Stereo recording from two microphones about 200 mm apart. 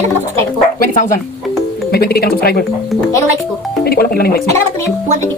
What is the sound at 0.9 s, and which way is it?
Speech, 40° left (ahead or behind).